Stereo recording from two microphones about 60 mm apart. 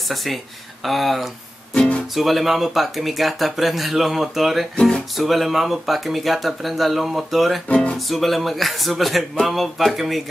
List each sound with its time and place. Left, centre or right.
0.1 s speech: centre
4.7 s music: centre
5.1 s speech: centre